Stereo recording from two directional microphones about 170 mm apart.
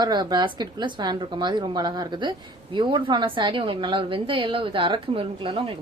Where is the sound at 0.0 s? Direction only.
25° right (ahead or behind).